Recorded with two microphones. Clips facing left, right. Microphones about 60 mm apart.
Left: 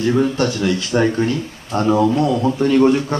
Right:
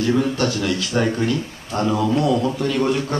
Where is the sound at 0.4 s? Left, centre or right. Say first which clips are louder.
Left 3 dB; left.